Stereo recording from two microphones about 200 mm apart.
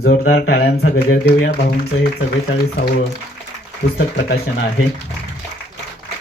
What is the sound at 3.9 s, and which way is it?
Speech, 50° left (ahead or behind).